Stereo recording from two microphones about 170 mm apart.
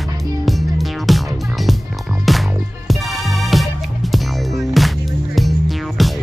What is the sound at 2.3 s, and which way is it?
Music, centre (ahead or behind).